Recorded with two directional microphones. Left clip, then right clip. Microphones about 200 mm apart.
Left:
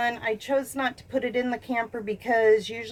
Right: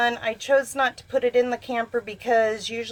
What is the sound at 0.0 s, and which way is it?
A woman's voice, 30° right (ahead or behind).